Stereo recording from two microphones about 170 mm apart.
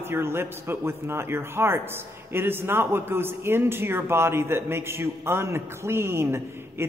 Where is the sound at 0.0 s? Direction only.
15° right (ahead or behind).